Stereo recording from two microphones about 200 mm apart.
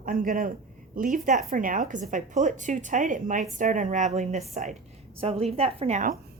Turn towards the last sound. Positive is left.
turn(degrees=-40)  # may be behind; listen again after turning